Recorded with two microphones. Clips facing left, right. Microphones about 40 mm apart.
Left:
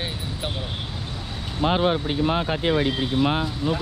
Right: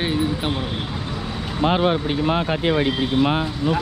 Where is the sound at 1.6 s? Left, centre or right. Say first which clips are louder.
Right 2 dB; right.